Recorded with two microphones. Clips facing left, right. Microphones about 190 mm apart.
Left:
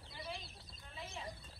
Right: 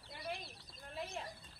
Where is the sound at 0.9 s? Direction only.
55° right (ahead or behind).